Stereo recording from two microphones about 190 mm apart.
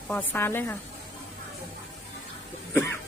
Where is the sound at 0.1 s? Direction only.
10° left (ahead or behind).